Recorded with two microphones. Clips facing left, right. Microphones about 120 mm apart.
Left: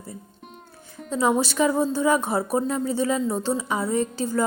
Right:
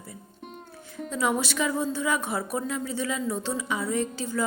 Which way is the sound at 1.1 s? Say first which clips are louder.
Left 5 dB; 30° left (ahead or behind).